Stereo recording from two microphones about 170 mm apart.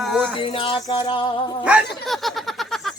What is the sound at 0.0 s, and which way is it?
Music, 5° right (ahead or behind).